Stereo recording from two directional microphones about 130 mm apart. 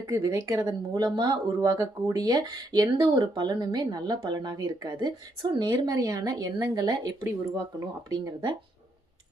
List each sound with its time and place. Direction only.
0.0 s speech: 25° right (ahead or behind)